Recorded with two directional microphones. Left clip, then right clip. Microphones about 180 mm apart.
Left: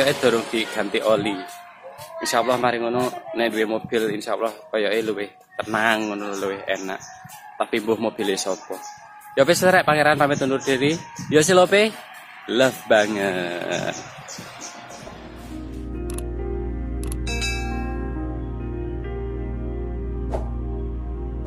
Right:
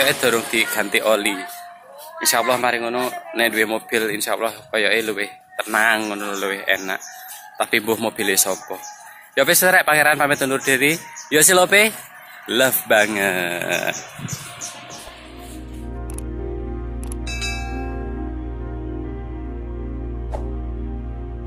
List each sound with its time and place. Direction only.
0.0 s a man's voice: centre (ahead or behind)
17.2 s music: centre (ahead or behind)